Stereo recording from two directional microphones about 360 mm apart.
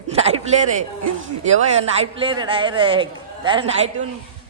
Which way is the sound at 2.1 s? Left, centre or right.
Centre.